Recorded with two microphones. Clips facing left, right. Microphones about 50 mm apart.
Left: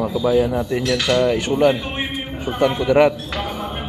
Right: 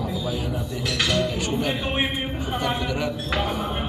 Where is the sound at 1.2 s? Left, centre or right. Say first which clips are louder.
Left 8 dB; left.